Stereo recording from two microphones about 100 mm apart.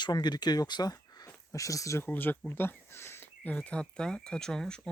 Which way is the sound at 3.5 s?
10° left (ahead or behind).